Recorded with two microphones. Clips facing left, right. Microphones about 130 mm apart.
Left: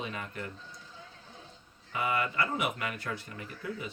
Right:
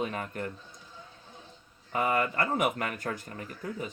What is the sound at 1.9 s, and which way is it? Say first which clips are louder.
Speech: right 3 dB; 45° right (ahead or behind).